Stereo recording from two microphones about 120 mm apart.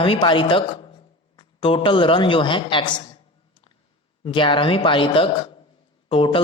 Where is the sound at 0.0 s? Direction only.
45° left (ahead or behind).